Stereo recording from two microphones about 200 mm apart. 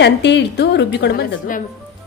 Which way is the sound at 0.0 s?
60° left (ahead or behind).